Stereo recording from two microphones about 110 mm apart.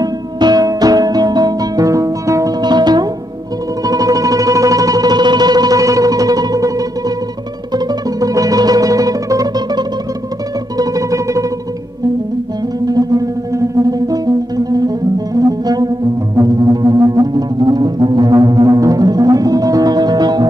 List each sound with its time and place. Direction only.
0.0 s music: 35° right (ahead or behind)
7.7 s music: 30° right (ahead or behind)
12.8 s music: 35° right (ahead or behind)